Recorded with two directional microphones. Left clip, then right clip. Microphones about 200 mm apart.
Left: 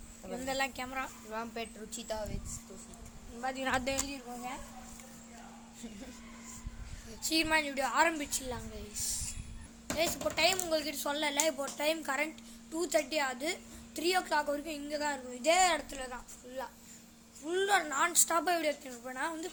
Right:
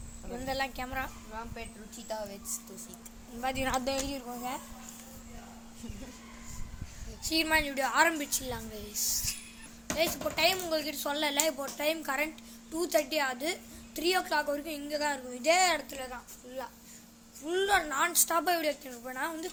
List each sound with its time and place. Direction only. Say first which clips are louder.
0.3 s speech: right 1 dB; centre (ahead or behind)
1.3 s speech: left 2 dB; 45° left (ahead or behind)
2.1 s speech: right 1 dB; 35° left (ahead or behind)
3.4 s a woman's voice: right 4 dB; 10° right (ahead or behind)
3.7 s a woman's voice: left 1 dB; 5° left (ahead or behind)
4.0 s a woman's voice: right 4 dB; 30° right (ahead or behind)
7.2 s a woman's voice: right 1 dB; 15° left (ahead or behind)
7.4 s a woman's voice: right 4 dB; centre (ahead or behind)
10.0 s speech: right 2 dB; centre (ahead or behind)
11.2 s a woman's voice: right 2 dB; 5° right (ahead or behind)
11.5 s a woman's voice: right 1 dB; 10° left (ahead or behind)
17.4 s a woman's voice: right 2 dB; centre (ahead or behind)